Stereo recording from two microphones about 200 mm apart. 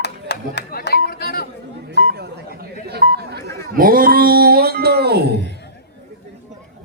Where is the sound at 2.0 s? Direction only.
55° right (ahead or behind).